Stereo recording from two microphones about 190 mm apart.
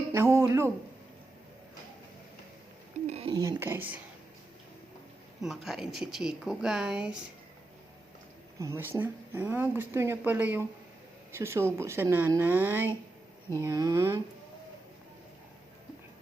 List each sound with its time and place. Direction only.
0.1 s speech: 15° right (ahead or behind)
3.1 s a sound: 30° right (ahead or behind)
3.3 s speech: 20° right (ahead or behind)
5.6 s speech: centre (ahead or behind)
8.5 s speech: 15° right (ahead or behind)